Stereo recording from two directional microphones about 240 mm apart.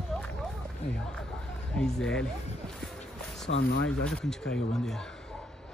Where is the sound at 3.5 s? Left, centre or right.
Left.